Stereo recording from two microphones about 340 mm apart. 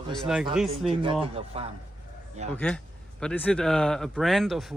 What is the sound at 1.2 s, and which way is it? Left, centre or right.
Speech, centre.